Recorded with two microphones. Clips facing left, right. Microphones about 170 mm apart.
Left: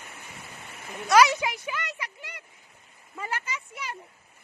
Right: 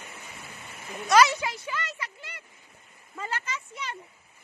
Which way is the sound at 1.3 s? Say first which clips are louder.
Left 2 dB; 15° left (ahead or behind).